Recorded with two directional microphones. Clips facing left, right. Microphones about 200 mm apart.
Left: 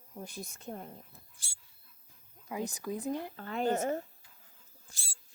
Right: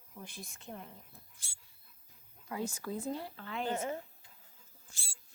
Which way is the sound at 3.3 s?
45° left (ahead or behind).